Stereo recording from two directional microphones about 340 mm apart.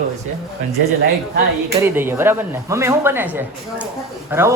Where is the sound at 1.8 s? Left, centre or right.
Centre.